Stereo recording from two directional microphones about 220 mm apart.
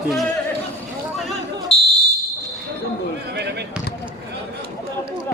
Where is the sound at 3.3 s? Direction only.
50° right (ahead or behind).